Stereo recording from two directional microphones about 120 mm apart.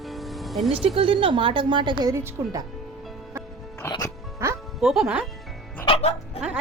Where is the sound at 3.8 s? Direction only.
20° left (ahead or behind).